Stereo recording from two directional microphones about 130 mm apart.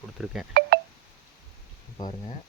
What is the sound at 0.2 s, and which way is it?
Speech, centre (ahead or behind).